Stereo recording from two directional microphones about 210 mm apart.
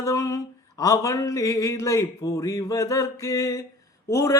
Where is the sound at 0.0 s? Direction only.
15° left (ahead or behind).